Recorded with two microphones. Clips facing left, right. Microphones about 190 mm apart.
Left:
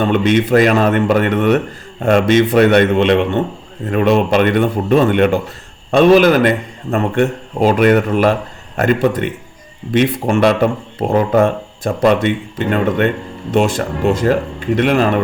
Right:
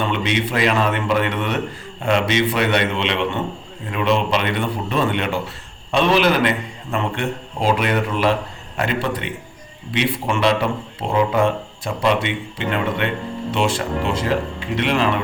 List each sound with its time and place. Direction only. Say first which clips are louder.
0.0 s speech: left 8 dB; 50° left (ahead or behind)